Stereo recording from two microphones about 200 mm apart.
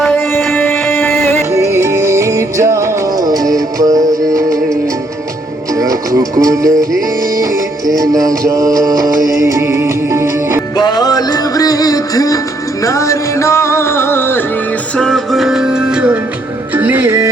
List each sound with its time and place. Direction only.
0.0 s music: 5° left (ahead or behind)
1.5 s music: 15° right (ahead or behind)
5.7 s music: 15° right (ahead or behind)
7.9 s music: 15° right (ahead or behind)
10.8 s music: 20° left (ahead or behind); by 17.2 s 10° right (ahead or behind)